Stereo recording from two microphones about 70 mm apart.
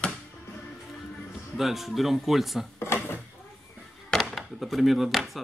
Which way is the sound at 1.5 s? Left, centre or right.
Centre.